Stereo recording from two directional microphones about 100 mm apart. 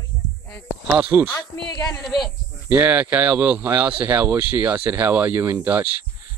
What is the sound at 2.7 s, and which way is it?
Speech, 15° right (ahead or behind).